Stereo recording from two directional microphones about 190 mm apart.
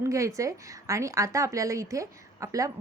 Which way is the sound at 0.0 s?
15° right (ahead or behind).